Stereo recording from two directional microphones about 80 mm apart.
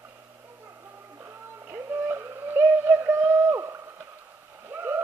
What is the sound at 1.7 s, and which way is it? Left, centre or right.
Synthetic singing, right.